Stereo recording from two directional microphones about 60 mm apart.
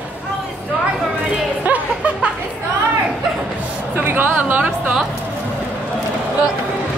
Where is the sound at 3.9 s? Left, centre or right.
Right.